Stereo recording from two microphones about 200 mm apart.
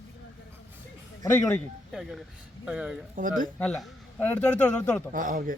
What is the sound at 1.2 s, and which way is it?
Speech, 10° left (ahead or behind).